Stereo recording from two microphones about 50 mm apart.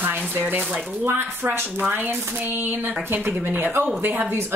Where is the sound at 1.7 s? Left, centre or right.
Right.